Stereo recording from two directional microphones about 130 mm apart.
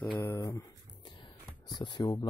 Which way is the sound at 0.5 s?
35° left (ahead or behind).